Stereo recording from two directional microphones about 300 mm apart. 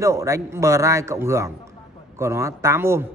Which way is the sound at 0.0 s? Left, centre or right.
Centre.